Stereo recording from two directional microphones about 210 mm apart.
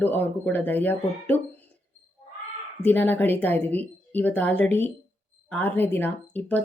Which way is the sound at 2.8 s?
10° left (ahead or behind).